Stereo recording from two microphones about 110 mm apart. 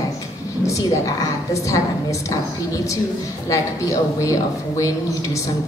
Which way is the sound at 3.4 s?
30° left (ahead or behind).